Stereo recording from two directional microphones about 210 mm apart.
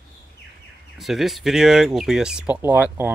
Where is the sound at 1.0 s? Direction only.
Centre (ahead or behind).